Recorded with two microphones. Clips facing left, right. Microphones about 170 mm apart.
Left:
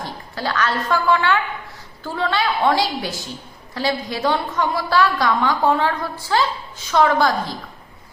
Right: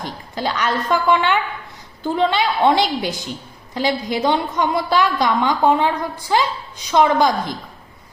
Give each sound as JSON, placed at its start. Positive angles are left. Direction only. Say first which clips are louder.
{"t": 0.0, "sound": "a woman's voice", "louder": "right 2 dB", "side_deg": -20}